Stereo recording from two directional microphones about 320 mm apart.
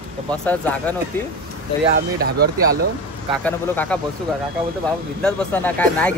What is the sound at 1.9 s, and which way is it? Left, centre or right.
Speech, right.